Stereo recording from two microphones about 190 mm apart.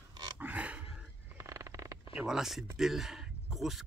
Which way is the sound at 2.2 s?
Centre (ahead or behind).